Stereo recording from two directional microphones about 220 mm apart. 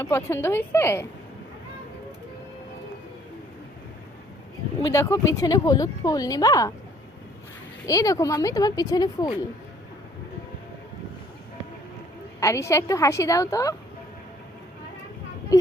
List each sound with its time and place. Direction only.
0.0 s speech: 10° left (ahead or behind)
4.8 s speech: 15° left (ahead or behind)
7.9 s speech: 15° left (ahead or behind)
12.4 s speech: 15° left (ahead or behind)